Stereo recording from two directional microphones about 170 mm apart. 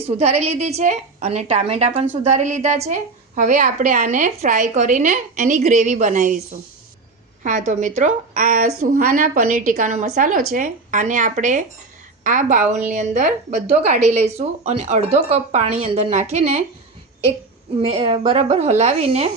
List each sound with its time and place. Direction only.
0.2 s a woman's voice: 40° right (ahead or behind)
7.4 s a woman's voice: 45° right (ahead or behind)
17.8 s a woman's voice: 35° right (ahead or behind)